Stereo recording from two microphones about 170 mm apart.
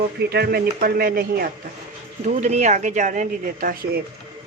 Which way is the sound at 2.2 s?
45° right (ahead or behind).